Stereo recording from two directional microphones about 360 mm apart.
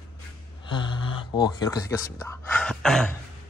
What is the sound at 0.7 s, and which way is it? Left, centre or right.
Speech, centre.